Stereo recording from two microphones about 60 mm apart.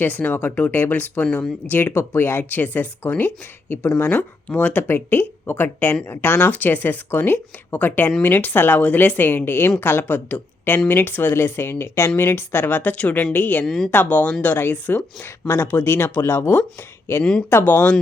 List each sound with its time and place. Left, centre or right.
0.0 s speech: left
1.7 s speech: left
13.7 s speech: centre
13.9 s speech: left
15.4 s speech: left
17.5 s speech: left